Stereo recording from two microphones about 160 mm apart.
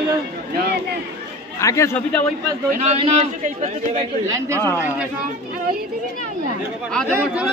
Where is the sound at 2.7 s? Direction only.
45° right (ahead or behind).